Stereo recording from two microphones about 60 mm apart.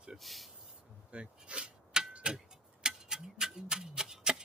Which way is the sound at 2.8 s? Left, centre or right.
Centre.